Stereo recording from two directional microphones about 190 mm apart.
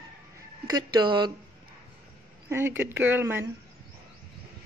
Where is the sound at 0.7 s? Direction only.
20° right (ahead or behind).